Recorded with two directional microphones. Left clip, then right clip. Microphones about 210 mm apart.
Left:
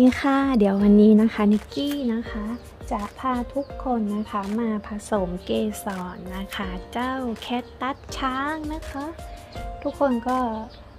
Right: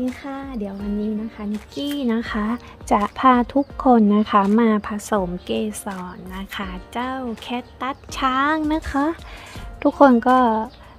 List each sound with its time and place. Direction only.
0.1 s speech: 25° left (ahead or behind)
2.0 s speech: 15° right (ahead or behind)
2.2 s speech: 30° right (ahead or behind)
4.9 s a woman's voice: 10° right (ahead or behind)
8.6 s speech: 30° right (ahead or behind)
9.8 s speech: 45° right (ahead or behind)